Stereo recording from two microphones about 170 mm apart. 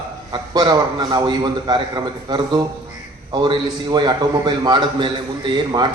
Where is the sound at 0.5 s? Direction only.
25° right (ahead or behind).